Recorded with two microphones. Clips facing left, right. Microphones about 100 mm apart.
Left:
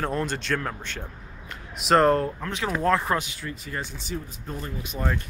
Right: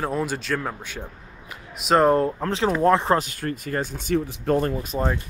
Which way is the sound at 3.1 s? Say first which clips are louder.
Right 5 dB; 50° right (ahead or behind).